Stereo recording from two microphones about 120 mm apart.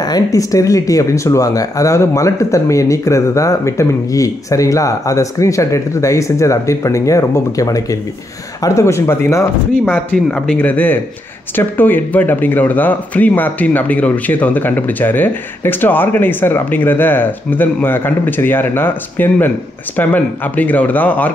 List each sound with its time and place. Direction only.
0.0 s speech: 30° left (ahead or behind); by 21.3 s 15° left (ahead or behind)